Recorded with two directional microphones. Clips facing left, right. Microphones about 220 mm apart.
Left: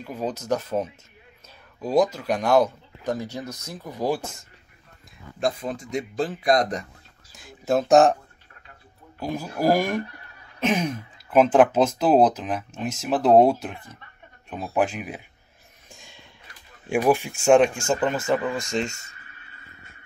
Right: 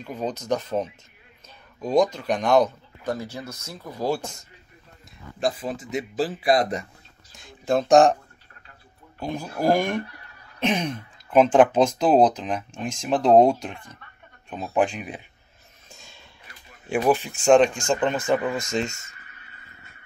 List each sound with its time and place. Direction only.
0.0 s speech: 5° left (ahead or behind)
5.4 s speech: 5° right (ahead or behind)
7.3 s speech: 5° left (ahead or behind)
9.2 s speech: 5° left (ahead or behind)
15.9 s a sound: 15° left (ahead or behind)
16.9 s speech: 10° left (ahead or behind)
18.4 s speech: 20° right (ahead or behind)